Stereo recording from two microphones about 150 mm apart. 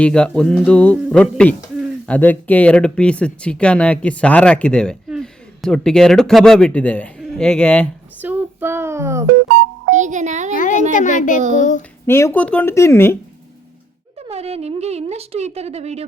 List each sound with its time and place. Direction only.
0.0 s speech: 5° left (ahead or behind)
8.2 s child singing: 10° right (ahead or behind)
9.9 s a child's voice: 55° right (ahead or behind)
10.5 s a child's voice: 60° left (ahead or behind)
12.0 s speech: 15° left (ahead or behind)
14.2 s speech: 45° right (ahead or behind)